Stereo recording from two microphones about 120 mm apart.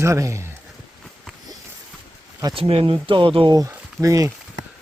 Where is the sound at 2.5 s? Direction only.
50° right (ahead or behind).